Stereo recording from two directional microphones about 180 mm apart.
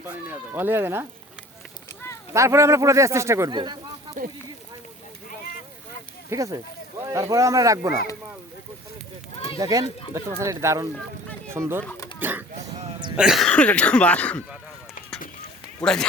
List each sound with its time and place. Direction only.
0.3 s speech: 10° right (ahead or behind)
2.3 s speech: 15° right (ahead or behind)
4.2 s speech: 50° right (ahead or behind)
6.3 s speech: 20° right (ahead or behind)
9.6 s speech: 20° right (ahead or behind); by 14.4 s 5° left (ahead or behind)
15.8 s speech: 5° left (ahead or behind)